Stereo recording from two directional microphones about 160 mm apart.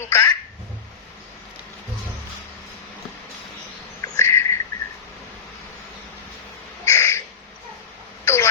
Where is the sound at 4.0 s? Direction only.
20° left (ahead or behind).